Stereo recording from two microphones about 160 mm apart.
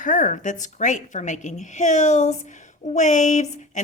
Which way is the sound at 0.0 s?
55° left (ahead or behind).